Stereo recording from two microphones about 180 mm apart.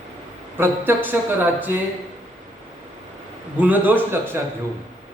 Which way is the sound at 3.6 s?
10° right (ahead or behind).